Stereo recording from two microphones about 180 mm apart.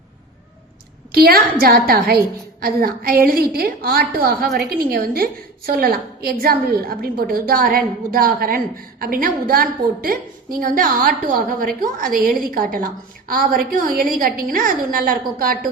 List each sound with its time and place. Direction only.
1.1 s a woman's voice: 55° right (ahead or behind)